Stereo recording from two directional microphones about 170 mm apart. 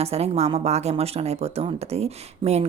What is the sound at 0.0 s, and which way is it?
A woman's voice, 35° right (ahead or behind).